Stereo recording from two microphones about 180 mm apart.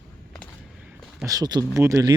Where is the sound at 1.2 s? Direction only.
20° right (ahead or behind).